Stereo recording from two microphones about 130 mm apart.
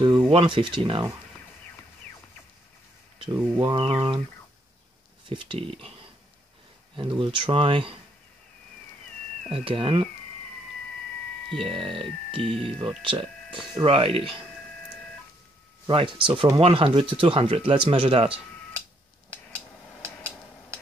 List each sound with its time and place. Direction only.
0.3 s speech: 40° right (ahead or behind)
3.3 s speech: 30° right (ahead or behind)
5.3 s speech: 45° right (ahead or behind)
7.0 s speech: 40° right (ahead or behind)
9.5 s speech: 45° right (ahead or behind)
11.6 s speech: 45° right (ahead or behind)
15.9 s speech: 40° right (ahead or behind)